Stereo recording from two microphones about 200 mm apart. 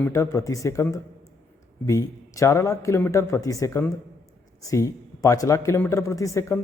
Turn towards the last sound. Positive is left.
turn(degrees=15)  # may be behind; listen again after turning